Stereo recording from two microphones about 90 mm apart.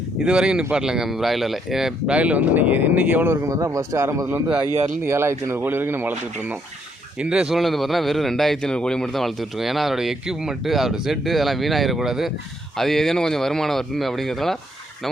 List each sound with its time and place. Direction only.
0.2 s speech: 10° right (ahead or behind)
3.4 s a man's voice: 35° right (ahead or behind); by 14.6 s 5° left (ahead or behind)